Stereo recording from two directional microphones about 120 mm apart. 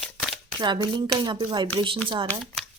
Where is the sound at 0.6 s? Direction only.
40° right (ahead or behind).